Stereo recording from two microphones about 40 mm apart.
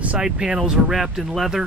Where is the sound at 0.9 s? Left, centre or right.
Centre.